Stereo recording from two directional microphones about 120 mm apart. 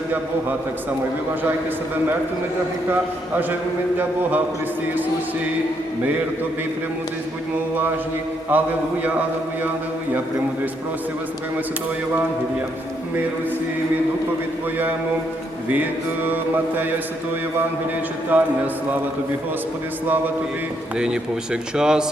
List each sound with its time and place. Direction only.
3.3 s mantra: 15° right (ahead or behind)
8.5 s mantra: 15° right (ahead or behind)
15.7 s mantra: 15° right (ahead or behind)
18.3 s mantra: 15° right (ahead or behind)
21.0 s mantra: 5° right (ahead or behind)